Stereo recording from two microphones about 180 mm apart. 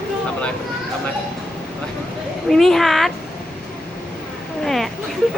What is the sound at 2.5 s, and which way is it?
Speech, centre (ahead or behind).